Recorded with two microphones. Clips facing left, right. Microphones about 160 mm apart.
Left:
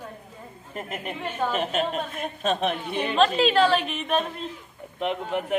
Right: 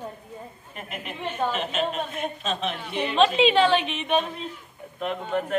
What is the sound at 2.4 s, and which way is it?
Speech, 55° left (ahead or behind).